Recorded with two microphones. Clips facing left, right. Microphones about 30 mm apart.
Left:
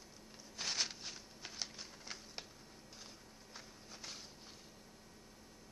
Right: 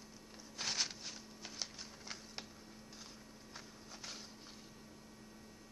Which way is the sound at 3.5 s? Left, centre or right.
Centre.